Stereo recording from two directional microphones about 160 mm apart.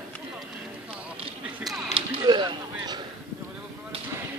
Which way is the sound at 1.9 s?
30° right (ahead or behind).